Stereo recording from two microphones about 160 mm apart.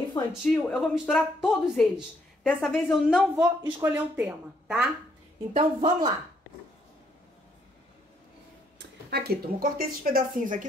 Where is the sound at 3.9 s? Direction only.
10° right (ahead or behind).